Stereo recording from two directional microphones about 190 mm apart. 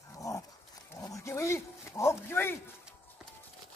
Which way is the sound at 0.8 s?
15° left (ahead or behind).